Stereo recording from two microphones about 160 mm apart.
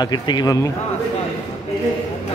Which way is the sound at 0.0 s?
25° left (ahead or behind).